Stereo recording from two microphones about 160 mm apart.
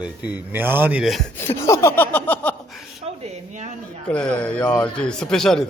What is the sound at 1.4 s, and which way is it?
Speech, 15° left (ahead or behind).